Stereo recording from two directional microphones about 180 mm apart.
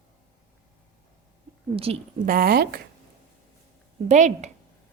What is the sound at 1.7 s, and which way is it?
Speech, 30° right (ahead or behind).